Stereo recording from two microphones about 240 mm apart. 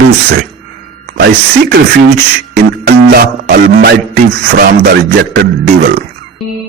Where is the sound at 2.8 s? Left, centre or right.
Right.